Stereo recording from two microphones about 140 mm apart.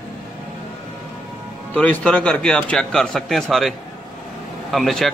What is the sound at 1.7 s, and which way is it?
Speech, 10° left (ahead or behind).